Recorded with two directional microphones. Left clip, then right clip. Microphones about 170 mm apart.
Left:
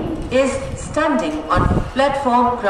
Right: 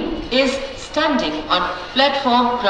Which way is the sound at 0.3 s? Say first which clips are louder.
Left 1 dB; 15° left (ahead or behind).